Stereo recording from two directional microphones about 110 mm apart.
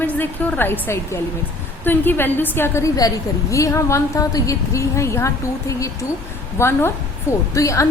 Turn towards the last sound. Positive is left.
turn(degrees=30)  # may be behind; listen again after turning